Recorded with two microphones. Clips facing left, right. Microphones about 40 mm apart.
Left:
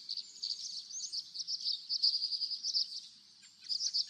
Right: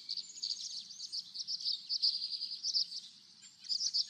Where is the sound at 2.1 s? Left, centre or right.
Right.